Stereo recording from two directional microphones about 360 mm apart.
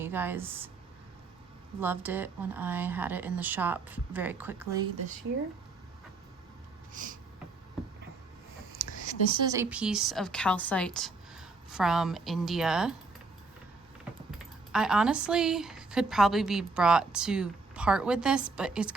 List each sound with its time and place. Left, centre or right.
0.0 s speech: centre
1.8 s speech: centre
6.9 s a sound: right
9.4 s speech: centre
14.3 s speech: centre